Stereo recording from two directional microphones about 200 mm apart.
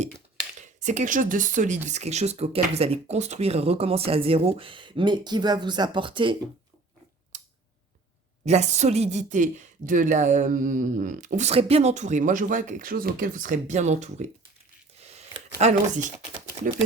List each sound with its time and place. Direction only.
0.8 s speech: 35° right (ahead or behind)
8.4 s a woman's voice: 35° right (ahead or behind)
15.0 s a sound: 30° right (ahead or behind)
15.6 s a woman's voice: 40° right (ahead or behind)